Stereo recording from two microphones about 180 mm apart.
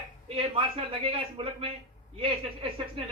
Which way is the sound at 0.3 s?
30° right (ahead or behind).